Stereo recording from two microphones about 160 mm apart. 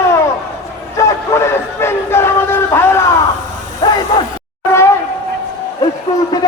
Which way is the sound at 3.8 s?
25° left (ahead or behind).